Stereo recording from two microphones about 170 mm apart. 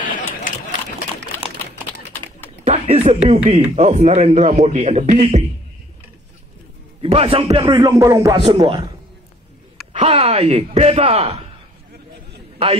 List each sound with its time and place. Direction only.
0.4 s a sound: 50° left (ahead or behind)
2.6 s a man's voice: 40° right (ahead or behind)
7.0 s a man's voice: 35° right (ahead or behind)
7.4 s music: 25° right (ahead or behind)
8.5 s music: 30° right (ahead or behind)
9.9 s speech: 40° right (ahead or behind)